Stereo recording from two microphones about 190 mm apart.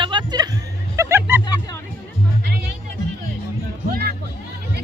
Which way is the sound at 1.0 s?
15° right (ahead or behind).